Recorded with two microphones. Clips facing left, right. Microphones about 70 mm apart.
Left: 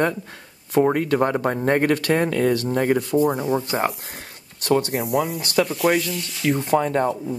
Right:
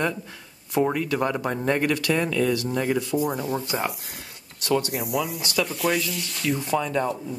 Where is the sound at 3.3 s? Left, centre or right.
Left.